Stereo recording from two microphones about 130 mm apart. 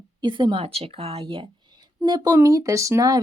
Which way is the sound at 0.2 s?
35° right (ahead or behind).